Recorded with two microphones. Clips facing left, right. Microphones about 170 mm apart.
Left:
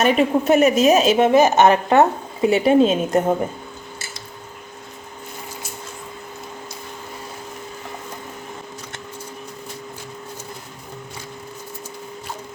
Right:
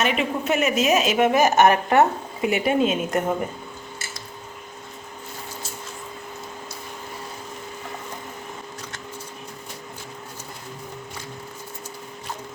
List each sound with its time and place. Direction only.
0.0 s a woman's voice: 40° left (ahead or behind)